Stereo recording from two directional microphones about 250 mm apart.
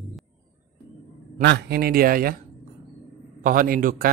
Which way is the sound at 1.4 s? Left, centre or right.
Right.